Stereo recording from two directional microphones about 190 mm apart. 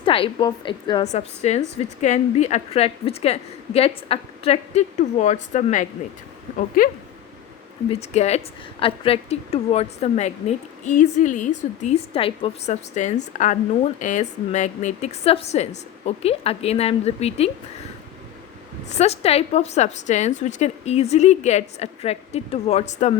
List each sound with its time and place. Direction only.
0.0 s a woman's voice: 25° left (ahead or behind); by 6.9 s 50° left (ahead or behind)
7.9 s a woman's voice: 35° left (ahead or behind)
18.9 s a woman's voice: 35° left (ahead or behind)